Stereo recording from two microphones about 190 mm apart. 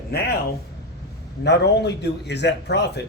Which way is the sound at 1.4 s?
65° left (ahead or behind).